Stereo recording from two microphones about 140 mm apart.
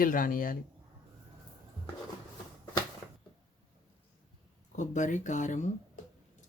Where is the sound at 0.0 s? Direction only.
80° left.